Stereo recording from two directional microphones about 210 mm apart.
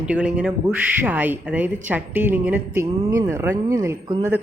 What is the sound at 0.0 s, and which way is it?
A woman's voice, 5° right (ahead or behind).